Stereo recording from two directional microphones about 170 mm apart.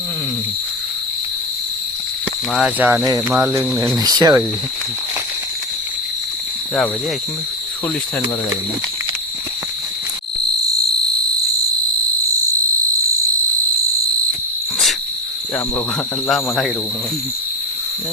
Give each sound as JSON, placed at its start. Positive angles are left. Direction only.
{"t": 2.5, "sound": "cricket", "side_deg": -5}
{"t": 3.9, "sound": "speech", "side_deg": -20}
{"t": 16.2, "sound": "speech", "side_deg": 0}